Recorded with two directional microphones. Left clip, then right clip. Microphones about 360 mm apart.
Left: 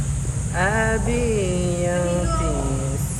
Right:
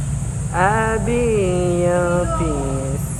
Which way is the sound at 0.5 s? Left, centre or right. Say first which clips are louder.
Right 4 dB; centre.